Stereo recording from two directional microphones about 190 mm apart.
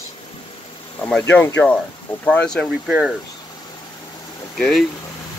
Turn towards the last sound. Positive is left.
turn(degrees=0)  # may be behind; listen again after turning